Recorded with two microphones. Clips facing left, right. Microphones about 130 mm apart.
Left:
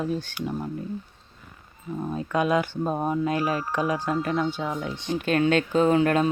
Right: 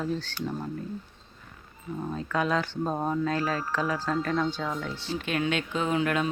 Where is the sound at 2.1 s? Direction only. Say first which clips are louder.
Left 4 dB; 15° left (ahead or behind).